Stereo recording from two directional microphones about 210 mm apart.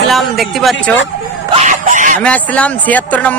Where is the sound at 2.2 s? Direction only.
5° left (ahead or behind).